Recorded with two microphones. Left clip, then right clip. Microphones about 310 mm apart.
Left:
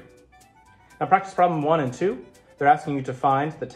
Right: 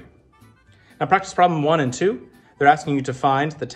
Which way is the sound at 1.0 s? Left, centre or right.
Right.